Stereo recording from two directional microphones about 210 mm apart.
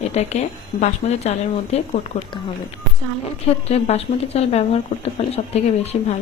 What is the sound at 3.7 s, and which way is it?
Speech, 30° left (ahead or behind).